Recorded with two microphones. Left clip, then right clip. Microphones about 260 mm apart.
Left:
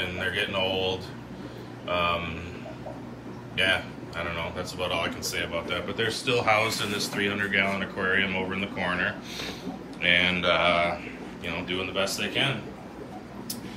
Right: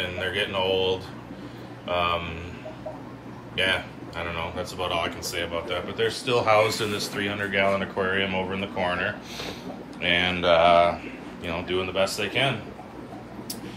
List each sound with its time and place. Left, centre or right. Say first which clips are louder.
0.0 s speech: right 1 dB; centre
3.5 s speech: even; centre